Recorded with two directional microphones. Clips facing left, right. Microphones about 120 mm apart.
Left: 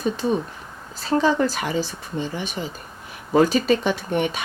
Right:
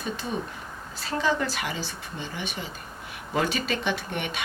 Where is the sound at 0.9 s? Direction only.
35° left (ahead or behind).